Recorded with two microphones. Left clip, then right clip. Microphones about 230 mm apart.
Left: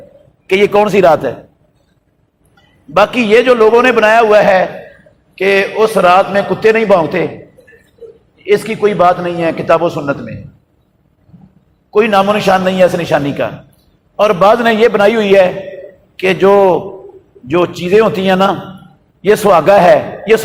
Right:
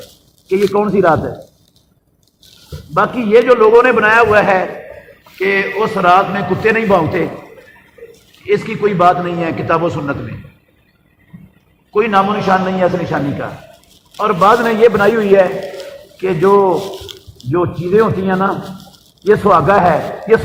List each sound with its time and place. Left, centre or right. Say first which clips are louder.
0.4 s a man's voice: left 4 dB; left
2.9 s a man's voice: left 2 dB; left
8.4 s a man's voice: left 3 dB; left
11.9 s a man's voice: left 3 dB; left